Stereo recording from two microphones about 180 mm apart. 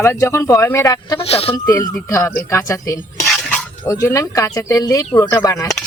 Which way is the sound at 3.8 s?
15° left (ahead or behind).